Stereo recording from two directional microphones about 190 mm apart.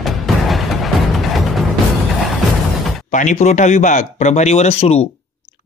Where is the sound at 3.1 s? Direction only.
40° left (ahead or behind).